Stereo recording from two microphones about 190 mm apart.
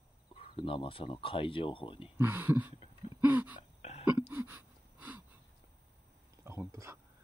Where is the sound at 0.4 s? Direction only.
30° left (ahead or behind).